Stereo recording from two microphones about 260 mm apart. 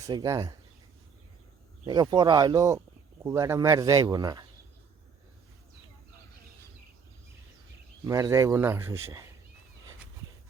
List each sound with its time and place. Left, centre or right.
0.0 s speech: centre
1.9 s speech: centre
8.0 s speech: centre